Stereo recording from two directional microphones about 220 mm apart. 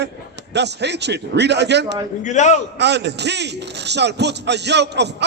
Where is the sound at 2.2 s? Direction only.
35° left (ahead or behind).